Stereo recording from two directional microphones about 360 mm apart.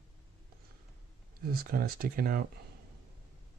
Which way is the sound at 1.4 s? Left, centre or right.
Right.